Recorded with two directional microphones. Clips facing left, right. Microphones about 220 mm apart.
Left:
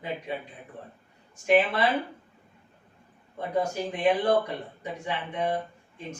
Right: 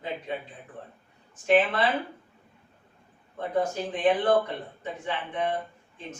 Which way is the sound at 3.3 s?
10° left (ahead or behind).